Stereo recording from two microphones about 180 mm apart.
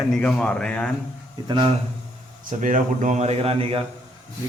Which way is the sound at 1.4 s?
25° right (ahead or behind).